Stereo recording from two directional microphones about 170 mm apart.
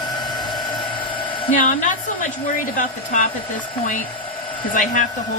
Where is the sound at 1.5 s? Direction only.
50° left (ahead or behind).